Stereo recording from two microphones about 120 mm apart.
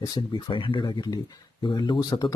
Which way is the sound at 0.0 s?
35° left (ahead or behind).